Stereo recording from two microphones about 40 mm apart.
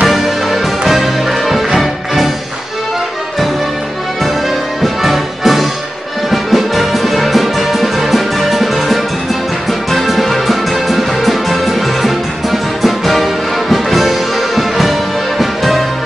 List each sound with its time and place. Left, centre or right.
0.1 s music: centre
4.8 s music: centre